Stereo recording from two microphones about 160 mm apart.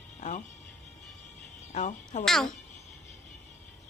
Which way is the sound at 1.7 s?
50° left (ahead or behind).